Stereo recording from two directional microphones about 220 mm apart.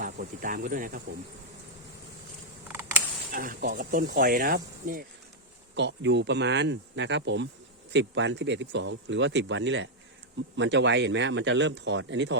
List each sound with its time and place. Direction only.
0.0 s speech: 35° right (ahead or behind)
2.6 s creak: 10° right (ahead or behind)
3.3 s speech: 40° right (ahead or behind)
5.7 s speech: 55° right (ahead or behind)